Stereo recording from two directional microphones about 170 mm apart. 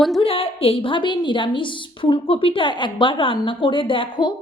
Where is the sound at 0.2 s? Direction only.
35° left (ahead or behind).